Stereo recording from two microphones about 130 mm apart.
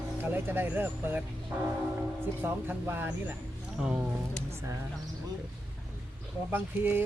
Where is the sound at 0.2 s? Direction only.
15° right (ahead or behind).